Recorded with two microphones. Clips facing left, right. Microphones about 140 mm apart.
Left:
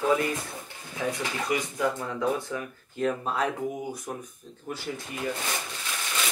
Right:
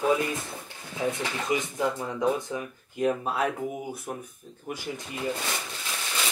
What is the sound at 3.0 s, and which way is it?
Speech, 10° right (ahead or behind).